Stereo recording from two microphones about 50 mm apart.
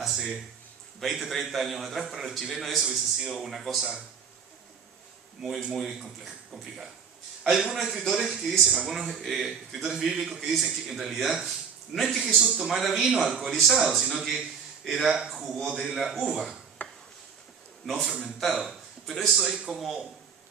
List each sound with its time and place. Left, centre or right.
1.0 s a man's voice: centre
5.7 s a man's voice: centre
9.8 s a man's voice: centre
16.8 s a sound: left
17.8 s a man's voice: centre